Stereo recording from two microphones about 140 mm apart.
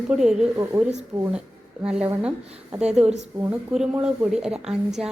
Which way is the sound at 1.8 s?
5° right (ahead or behind).